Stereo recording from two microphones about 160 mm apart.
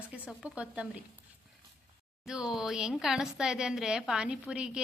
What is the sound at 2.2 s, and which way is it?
A woman's voice, 5° right (ahead or behind).